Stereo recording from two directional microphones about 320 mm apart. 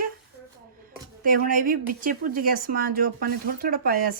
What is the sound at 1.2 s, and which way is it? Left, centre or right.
Speech, right.